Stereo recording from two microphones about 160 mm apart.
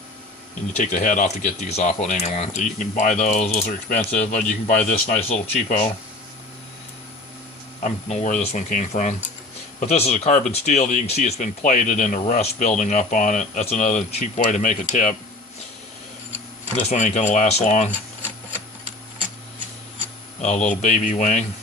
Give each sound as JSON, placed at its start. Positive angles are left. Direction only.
{"t": 0.7, "sound": "speech", "side_deg": 50}
{"t": 3.9, "sound": "speech", "side_deg": 10}
{"t": 4.3, "sound": "speech", "side_deg": 50}
{"t": 7.8, "sound": "speech", "side_deg": 50}
{"t": 16.9, "sound": "speech", "side_deg": 50}
{"t": 20.4, "sound": "speech", "side_deg": 50}